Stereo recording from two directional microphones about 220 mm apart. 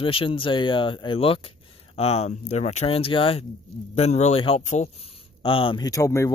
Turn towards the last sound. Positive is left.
turn(degrees=15)  # may be behind; listen again after turning